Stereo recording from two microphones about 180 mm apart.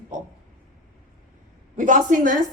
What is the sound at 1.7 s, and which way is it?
Speech, 45° right (ahead or behind).